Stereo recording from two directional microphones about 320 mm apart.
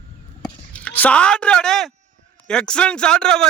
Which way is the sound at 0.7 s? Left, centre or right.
Centre.